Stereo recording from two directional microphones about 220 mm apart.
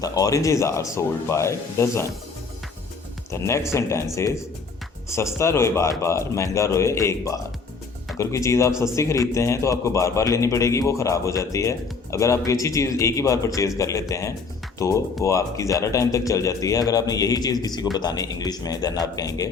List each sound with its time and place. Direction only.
0.0 s a man's voice: 15° left (ahead or behind)
3.3 s a man's voice: 10° left (ahead or behind)